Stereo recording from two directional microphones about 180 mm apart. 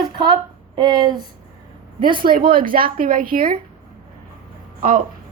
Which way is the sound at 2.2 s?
55° right (ahead or behind).